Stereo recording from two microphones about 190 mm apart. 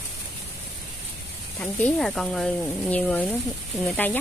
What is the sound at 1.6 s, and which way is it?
Speech, 5° left (ahead or behind).